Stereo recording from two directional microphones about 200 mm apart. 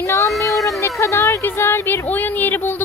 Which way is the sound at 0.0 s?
15° left (ahead or behind).